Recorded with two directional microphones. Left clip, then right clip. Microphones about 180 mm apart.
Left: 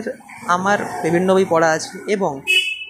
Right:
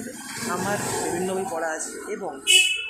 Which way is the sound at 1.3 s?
35° left (ahead or behind).